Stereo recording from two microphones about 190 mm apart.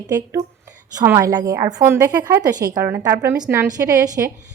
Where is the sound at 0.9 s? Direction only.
15° right (ahead or behind).